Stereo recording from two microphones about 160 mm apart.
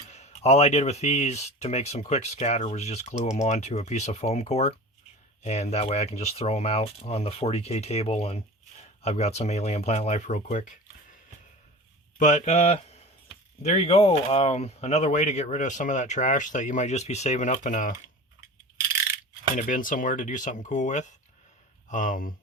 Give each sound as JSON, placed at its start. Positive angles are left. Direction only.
{"t": 0.1, "sound": "speech", "side_deg": 45}
{"t": 12.2, "sound": "speech", "side_deg": 50}
{"t": 19.5, "sound": "speech", "side_deg": 55}